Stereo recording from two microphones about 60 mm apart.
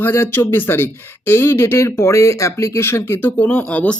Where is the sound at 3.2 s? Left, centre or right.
Left.